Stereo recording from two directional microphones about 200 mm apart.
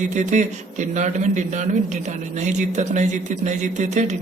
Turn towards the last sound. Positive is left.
turn(degrees=-35)  # may be behind; listen again after turning